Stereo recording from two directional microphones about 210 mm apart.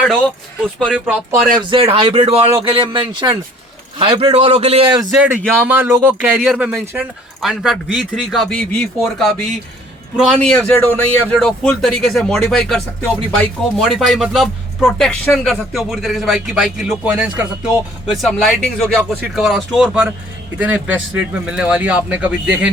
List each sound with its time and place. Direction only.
0.8 s speech: 5° right (ahead or behind)
1.5 s a man's voice: 25° right (ahead or behind)
5.1 s speech: 5° right (ahead or behind)